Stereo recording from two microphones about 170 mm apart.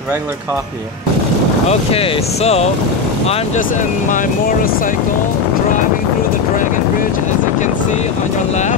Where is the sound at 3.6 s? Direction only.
50° left (ahead or behind).